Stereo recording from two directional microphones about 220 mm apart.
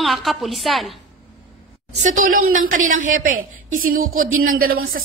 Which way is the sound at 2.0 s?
35° right (ahead or behind).